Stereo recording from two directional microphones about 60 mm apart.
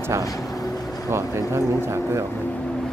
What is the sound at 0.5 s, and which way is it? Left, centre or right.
Vehicle, left.